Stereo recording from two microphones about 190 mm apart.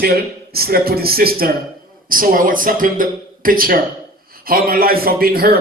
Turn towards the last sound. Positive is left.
turn(degrees=-50)  # may be behind; listen again after turning